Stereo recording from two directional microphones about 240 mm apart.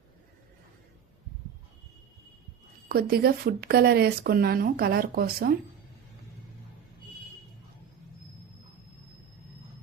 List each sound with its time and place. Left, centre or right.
2.9 s speech: right